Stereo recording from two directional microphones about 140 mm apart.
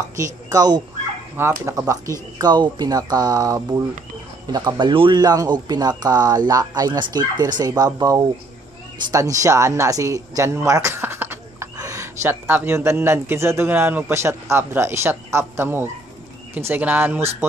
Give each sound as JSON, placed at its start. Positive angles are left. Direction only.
{"t": 0.1, "sound": "speech", "side_deg": -25}
{"t": 1.3, "sound": "speech", "side_deg": -15}